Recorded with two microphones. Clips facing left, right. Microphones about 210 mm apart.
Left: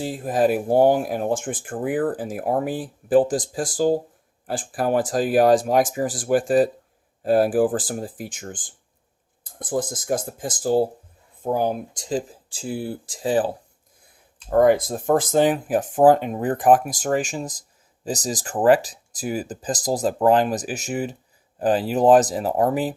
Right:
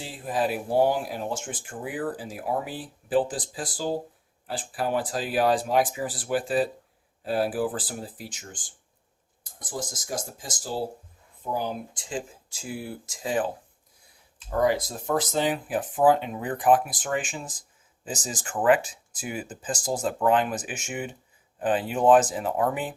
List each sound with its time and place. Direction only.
0.0 s speech: 45° left (ahead or behind)
14.5 s speech: 50° left (ahead or behind)